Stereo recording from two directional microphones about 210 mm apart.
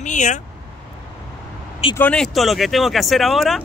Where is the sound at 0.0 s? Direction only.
35° left (ahead or behind).